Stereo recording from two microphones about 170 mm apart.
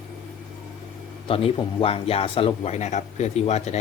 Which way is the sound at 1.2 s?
30° left (ahead or behind).